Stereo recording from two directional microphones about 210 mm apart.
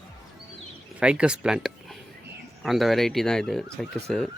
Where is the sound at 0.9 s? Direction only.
5° right (ahead or behind).